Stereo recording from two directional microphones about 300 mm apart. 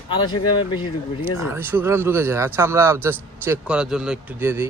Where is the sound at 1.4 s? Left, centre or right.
Centre.